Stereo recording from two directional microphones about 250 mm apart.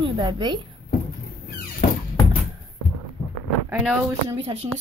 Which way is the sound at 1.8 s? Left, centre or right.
Left.